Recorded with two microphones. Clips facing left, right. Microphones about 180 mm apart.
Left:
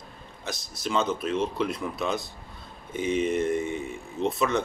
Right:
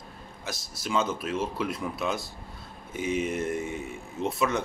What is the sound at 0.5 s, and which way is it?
Speech, 5° right (ahead or behind).